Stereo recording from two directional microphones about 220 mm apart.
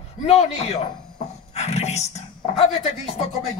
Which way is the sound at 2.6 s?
30° left (ahead or behind).